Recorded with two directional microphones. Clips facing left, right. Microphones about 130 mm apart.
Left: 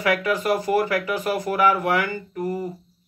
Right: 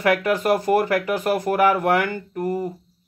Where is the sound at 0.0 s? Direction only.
50° right (ahead or behind).